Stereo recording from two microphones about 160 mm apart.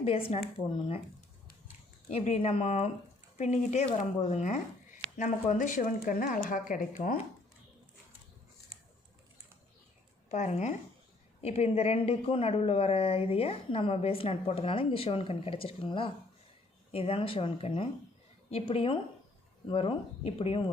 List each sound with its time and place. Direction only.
0.0 s a woman's voice: 35° left (ahead or behind)
2.0 s a woman's voice: 40° left (ahead or behind); by 7.2 s 60° left (ahead or behind)
10.3 s a woman's voice: 45° left (ahead or behind)